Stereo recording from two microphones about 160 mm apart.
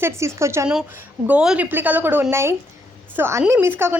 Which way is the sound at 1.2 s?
5° right (ahead or behind).